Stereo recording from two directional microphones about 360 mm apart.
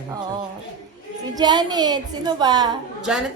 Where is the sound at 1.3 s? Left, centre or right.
Centre.